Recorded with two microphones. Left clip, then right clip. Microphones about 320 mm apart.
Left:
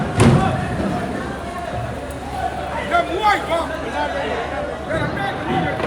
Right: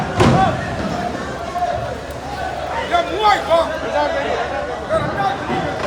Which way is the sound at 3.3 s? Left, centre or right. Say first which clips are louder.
Right 3 dB; centre.